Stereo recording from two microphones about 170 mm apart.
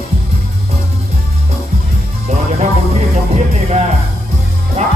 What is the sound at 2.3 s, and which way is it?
Music, 40° right (ahead or behind).